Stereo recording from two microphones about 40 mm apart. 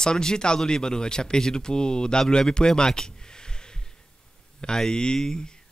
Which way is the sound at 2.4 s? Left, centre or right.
Centre.